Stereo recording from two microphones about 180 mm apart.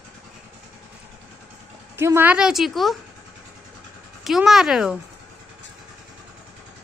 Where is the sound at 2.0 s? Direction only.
15° right (ahead or behind).